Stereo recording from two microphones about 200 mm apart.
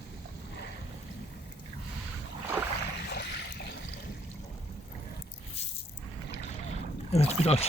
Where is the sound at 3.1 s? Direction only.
50° left (ahead or behind).